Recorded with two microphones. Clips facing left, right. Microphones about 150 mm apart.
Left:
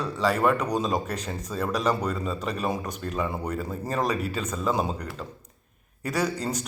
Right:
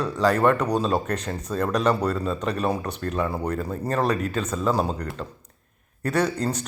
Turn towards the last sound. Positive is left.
turn(degrees=10)  # may be behind; listen again after turning